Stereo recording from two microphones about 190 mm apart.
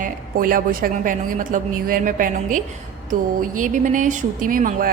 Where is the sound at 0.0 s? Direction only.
45° right (ahead or behind).